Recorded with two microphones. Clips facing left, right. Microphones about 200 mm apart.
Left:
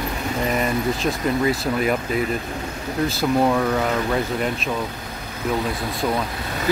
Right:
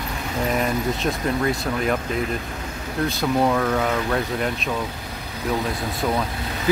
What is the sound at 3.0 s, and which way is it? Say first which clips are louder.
Speech: left 1 dB; centre (ahead or behind).